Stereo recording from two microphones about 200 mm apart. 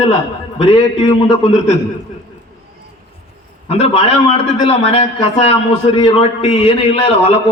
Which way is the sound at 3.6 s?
30° left (ahead or behind).